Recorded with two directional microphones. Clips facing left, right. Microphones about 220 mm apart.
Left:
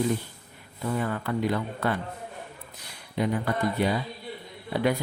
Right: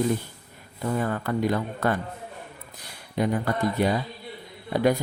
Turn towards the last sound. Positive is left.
turn(degrees=-45)  # may be behind; listen again after turning